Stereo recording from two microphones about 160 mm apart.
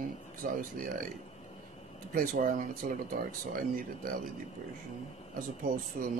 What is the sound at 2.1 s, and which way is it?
Speech, 55° right (ahead or behind).